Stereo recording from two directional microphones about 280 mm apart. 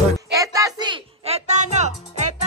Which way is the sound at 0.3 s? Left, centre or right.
Centre.